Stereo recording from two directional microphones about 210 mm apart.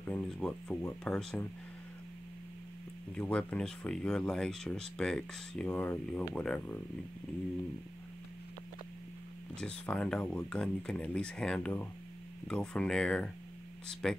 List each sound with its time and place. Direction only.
0.1 s speech: 5° left (ahead or behind)
3.2 s speech: 5° left (ahead or behind)
9.6 s speech: 5° left (ahead or behind)